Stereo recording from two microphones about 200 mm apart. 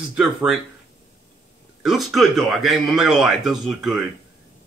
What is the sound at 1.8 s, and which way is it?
Speech, centre (ahead or behind).